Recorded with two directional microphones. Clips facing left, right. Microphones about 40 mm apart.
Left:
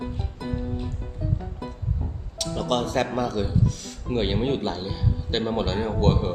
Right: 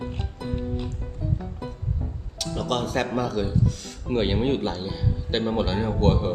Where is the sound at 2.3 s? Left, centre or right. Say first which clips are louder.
Left 2 dB; centre.